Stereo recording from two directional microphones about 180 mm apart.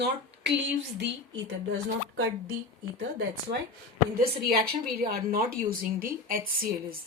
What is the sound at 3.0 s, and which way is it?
A woman's voice, 65° right (ahead or behind).